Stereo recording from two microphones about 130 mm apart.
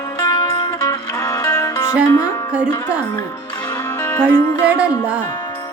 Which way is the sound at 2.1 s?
20° left (ahead or behind).